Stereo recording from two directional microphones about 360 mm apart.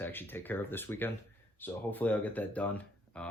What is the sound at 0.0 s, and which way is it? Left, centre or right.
Speech, centre.